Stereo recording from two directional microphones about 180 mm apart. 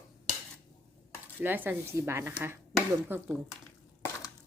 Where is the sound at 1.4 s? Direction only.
10° right (ahead or behind).